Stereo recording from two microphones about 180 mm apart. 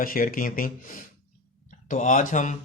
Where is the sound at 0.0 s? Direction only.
50° left (ahead or behind).